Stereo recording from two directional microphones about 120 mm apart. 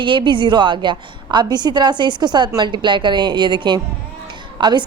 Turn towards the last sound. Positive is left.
turn(degrees=-40)  # may be behind; listen again after turning